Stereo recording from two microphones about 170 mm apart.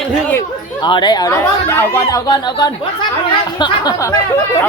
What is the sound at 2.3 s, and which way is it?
Speech, 25° left (ahead or behind).